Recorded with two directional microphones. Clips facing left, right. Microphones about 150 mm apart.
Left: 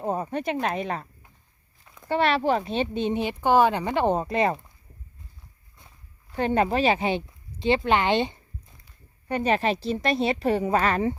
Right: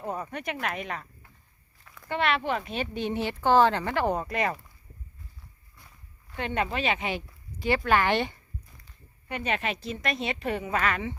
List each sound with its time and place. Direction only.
0.0 s speech: 30° left (ahead or behind)
1.8 s a sound: 20° left (ahead or behind)
2.1 s speech: 35° left (ahead or behind)
6.3 s a woman's voice: 35° left (ahead or behind); by 8.4 s 20° left (ahead or behind)
9.3 s a woman's voice: 35° left (ahead or behind)